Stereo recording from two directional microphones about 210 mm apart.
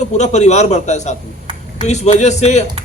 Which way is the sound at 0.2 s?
35° left (ahead or behind).